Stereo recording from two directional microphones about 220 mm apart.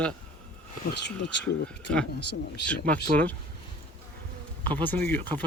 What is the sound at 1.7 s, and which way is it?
Speech, 5° left (ahead or behind).